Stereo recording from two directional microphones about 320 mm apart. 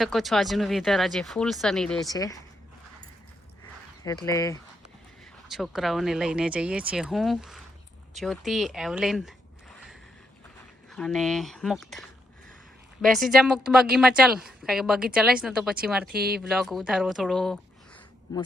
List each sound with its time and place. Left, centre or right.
0.0 s speech: centre
4.0 s speech: centre
5.5 s speech: centre
10.9 s speech: centre
16.1 s speech: right
16.4 s speech: centre